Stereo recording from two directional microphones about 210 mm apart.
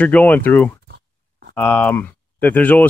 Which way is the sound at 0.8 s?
50° right (ahead or behind).